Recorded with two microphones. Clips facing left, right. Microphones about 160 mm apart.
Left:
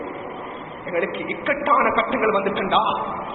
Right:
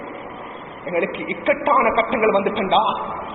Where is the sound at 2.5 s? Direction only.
35° right (ahead or behind).